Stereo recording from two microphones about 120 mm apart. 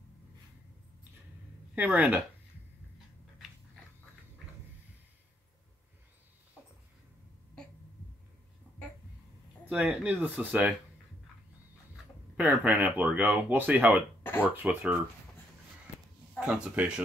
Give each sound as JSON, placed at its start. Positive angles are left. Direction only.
{"t": 1.8, "sound": "speech", "side_deg": -15}
{"t": 9.7, "sound": "speech", "side_deg": -10}
{"t": 12.4, "sound": "speech", "side_deg": -15}
{"t": 14.2, "sound": "a sound", "side_deg": 15}
{"t": 14.5, "sound": "speech", "side_deg": -15}
{"t": 16.3, "sound": "speech", "side_deg": -5}